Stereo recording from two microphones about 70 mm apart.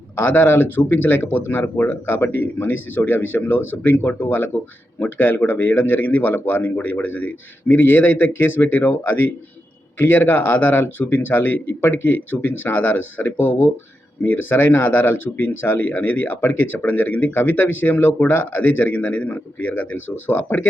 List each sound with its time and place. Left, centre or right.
0.2 s speech: left